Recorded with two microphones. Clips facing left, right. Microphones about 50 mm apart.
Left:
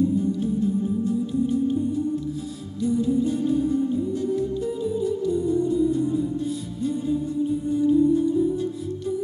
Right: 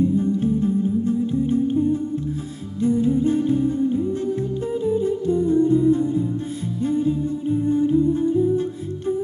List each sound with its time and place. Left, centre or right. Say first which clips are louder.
0.2 s music: right 3 dB; right
2.8 s humming: right 3 dB; right
6.8 s music: right 4 dB; right